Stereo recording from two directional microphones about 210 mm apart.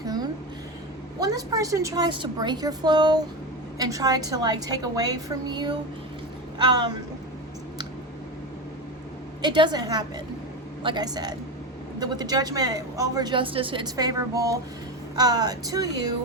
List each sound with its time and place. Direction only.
0.0 s a sound: 20° right (ahead or behind)
1.2 s a woman's voice: 15° right (ahead or behind)
9.4 s speech: 20° right (ahead or behind)